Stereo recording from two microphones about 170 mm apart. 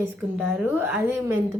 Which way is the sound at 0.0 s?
5° right (ahead or behind).